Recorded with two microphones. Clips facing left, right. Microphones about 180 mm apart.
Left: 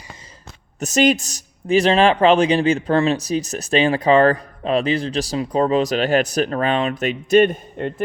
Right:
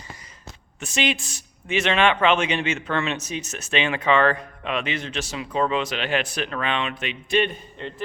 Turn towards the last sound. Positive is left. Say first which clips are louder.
# left 8 dB
turn(degrees=50)  # may be behind; listen again after turning